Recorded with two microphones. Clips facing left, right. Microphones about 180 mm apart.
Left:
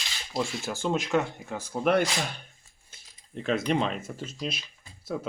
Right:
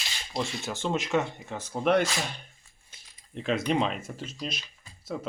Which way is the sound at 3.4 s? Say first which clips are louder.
Even; 5° left (ahead or behind).